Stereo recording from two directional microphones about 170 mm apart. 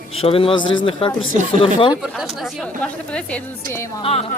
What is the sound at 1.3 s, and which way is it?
Speech, 45° right (ahead or behind).